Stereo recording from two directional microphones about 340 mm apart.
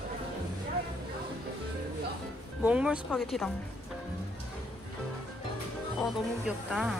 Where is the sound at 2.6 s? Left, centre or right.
Centre.